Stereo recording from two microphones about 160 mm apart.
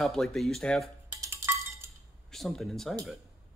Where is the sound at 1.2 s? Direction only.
15° right (ahead or behind).